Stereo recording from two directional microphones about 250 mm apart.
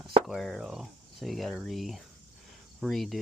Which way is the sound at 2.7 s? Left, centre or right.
Centre.